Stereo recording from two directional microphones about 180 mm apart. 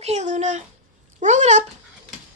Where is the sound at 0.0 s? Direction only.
40° right (ahead or behind).